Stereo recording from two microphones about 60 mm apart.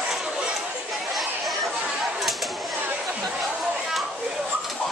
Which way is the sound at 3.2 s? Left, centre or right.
Centre.